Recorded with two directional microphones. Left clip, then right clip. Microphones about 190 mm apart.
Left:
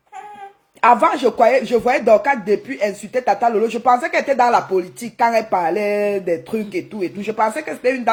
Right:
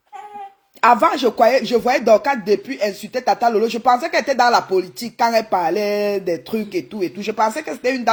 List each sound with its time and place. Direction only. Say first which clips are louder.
0.8 s speech: left 1 dB; 40° right (ahead or behind)
4.7 s speech: right 1 dB; 25° right (ahead or behind); by 8.1 s 40° right (ahead or behind)